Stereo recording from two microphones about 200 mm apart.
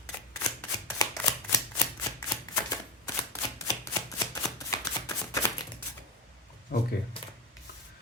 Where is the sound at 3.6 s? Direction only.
15° left (ahead or behind).